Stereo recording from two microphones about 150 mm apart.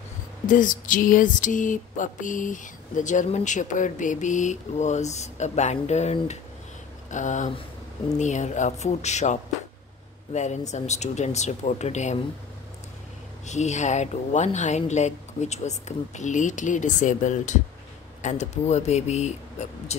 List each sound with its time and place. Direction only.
0.5 s a sound: 60° left (ahead or behind)
8.2 s speech: 55° left (ahead or behind)
13.5 s speech: 50° left (ahead or behind)